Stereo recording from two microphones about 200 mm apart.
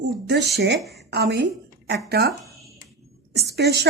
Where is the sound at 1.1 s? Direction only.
55° right (ahead or behind).